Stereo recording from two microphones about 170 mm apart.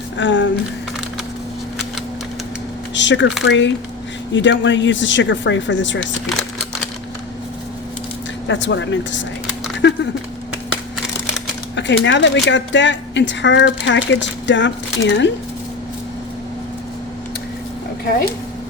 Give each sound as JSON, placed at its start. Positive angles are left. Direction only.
{"t": 0.2, "sound": "speech", "side_deg": 90}
{"t": 2.9, "sound": "speech", "side_deg": 90}
{"t": 6.0, "sound": "speech", "side_deg": 5}
{"t": 8.4, "sound": "speech", "side_deg": 90}
{"t": 11.8, "sound": "speech", "side_deg": 90}